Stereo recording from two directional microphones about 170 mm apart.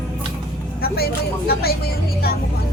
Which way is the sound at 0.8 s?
65° left (ahead or behind).